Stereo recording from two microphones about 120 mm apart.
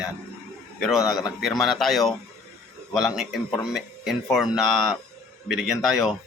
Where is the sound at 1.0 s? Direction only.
30° left (ahead or behind).